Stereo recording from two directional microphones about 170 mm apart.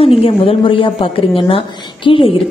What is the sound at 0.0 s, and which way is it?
A woman's voice, 35° left (ahead or behind).